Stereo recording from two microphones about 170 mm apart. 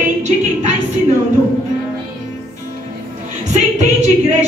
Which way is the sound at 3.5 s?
45° right (ahead or behind).